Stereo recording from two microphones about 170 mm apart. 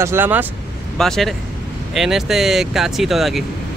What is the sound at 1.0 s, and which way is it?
Speech, centre (ahead or behind).